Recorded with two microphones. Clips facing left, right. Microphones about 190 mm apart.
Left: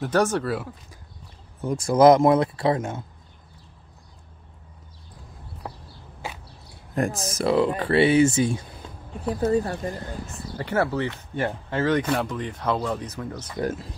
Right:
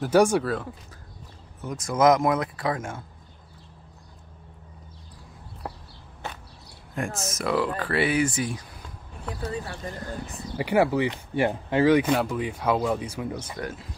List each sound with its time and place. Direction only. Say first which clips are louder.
0.0 s speech: right 3 dB; 10° right (ahead or behind)
0.4 s speech: left 1 dB; centre (ahead or behind)
1.6 s speech: left 5 dB; 30° left (ahead or behind)
5.6 s a sound: right 1 dB; 5° right (ahead or behind)
7.2 s speech: left 4 dB; 30° left (ahead or behind)
9.2 s speech: left 10 dB; 40° left (ahead or behind)
10.6 s speech: right 3 dB; 15° right (ahead or behind)